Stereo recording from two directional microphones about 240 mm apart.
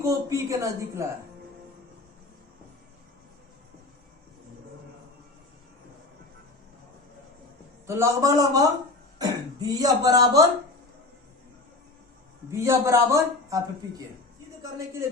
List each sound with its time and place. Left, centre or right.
0.0 s speech: centre
7.9 s speech: centre
12.5 s speech: centre